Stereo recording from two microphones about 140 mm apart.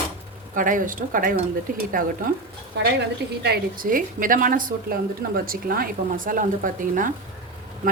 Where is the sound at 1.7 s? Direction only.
90° right.